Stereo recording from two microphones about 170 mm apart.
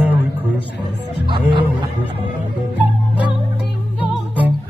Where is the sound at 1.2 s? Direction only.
30° right (ahead or behind).